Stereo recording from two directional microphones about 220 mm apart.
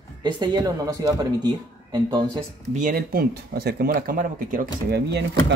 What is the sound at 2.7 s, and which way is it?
Speech, 40° right (ahead or behind).